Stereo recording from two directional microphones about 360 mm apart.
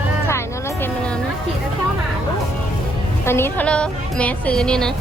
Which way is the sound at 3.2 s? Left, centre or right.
Centre.